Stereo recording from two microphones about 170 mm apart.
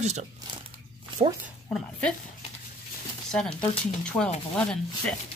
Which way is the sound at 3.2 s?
5° left (ahead or behind).